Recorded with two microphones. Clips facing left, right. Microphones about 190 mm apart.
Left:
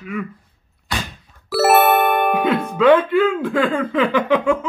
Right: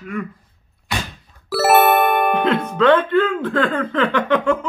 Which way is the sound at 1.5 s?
Centre (ahead or behind).